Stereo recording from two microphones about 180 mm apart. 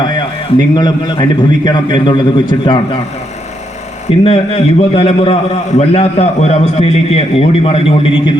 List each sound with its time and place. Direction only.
0.8 s a man's voice: 25° left (ahead or behind)
4.2 s a man's voice: 35° left (ahead or behind)